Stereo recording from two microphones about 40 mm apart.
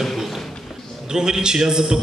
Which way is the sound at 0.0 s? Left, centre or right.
Centre.